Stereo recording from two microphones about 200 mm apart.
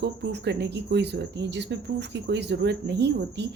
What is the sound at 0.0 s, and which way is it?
Speech, 55° right (ahead or behind).